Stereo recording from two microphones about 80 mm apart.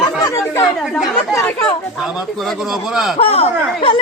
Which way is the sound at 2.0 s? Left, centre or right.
Centre.